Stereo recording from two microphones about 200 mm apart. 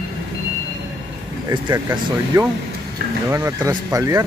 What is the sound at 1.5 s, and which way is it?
Speech, 20° right (ahead or behind).